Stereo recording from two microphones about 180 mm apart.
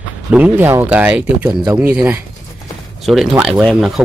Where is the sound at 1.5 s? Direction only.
20° right (ahead or behind).